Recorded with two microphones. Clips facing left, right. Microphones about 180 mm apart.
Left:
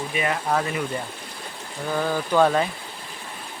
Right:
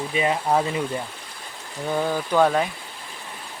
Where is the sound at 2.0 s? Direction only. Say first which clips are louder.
Even; 15° right (ahead or behind).